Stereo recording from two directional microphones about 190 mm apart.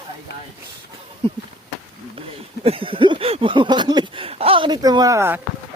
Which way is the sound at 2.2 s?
30° right (ahead or behind).